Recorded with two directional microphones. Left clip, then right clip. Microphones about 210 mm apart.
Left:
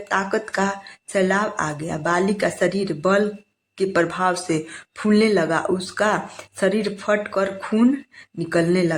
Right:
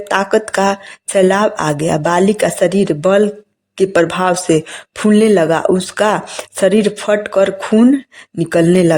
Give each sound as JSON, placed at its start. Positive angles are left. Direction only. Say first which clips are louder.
{"t": 0.1, "sound": "speech", "louder": "right 8 dB", "side_deg": -40}